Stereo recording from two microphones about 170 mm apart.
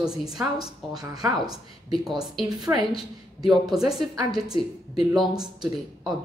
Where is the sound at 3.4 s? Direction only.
Centre (ahead or behind).